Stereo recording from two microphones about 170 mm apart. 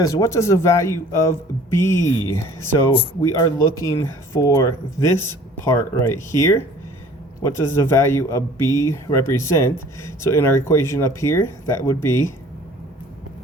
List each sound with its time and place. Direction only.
0.0 s speech: 20° left (ahead or behind)